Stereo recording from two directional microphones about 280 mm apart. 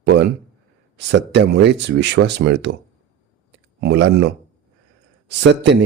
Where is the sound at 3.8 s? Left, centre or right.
Right.